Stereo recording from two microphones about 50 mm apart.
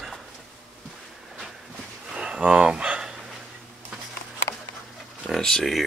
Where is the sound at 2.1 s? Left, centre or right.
Centre.